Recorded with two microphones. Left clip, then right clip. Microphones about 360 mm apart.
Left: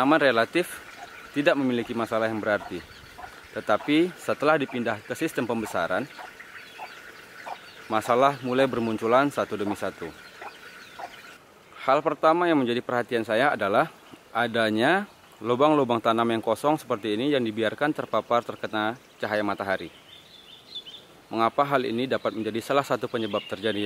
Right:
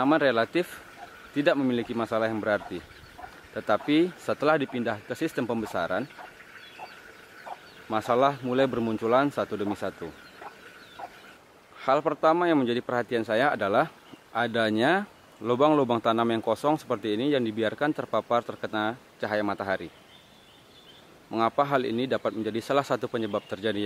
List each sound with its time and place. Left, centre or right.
0.0 s speech: centre
7.9 s speech: centre
11.8 s speech: centre
21.3 s speech: centre